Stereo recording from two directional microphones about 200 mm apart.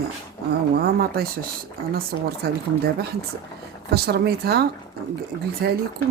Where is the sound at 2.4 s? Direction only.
50° right (ahead or behind).